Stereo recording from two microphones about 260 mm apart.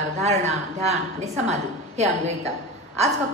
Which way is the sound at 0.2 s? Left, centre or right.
Right.